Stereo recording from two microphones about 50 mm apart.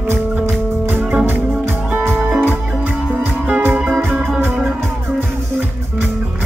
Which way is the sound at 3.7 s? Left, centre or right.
Right.